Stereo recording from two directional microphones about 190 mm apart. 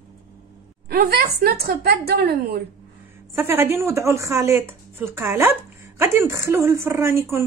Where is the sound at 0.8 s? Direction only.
55° right (ahead or behind).